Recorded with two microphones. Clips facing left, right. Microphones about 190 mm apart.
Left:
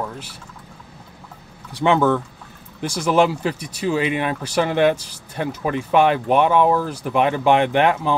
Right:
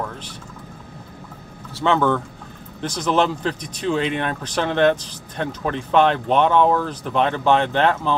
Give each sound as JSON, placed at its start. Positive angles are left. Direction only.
{"t": 1.7, "sound": "speech", "side_deg": 15}